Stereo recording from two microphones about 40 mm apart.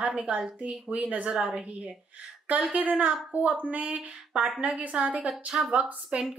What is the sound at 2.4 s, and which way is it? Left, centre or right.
Speech, right.